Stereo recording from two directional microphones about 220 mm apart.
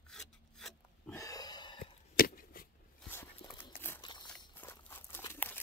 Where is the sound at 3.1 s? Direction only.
10° left (ahead or behind).